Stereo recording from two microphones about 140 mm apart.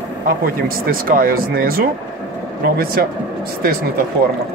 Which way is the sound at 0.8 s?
90° right.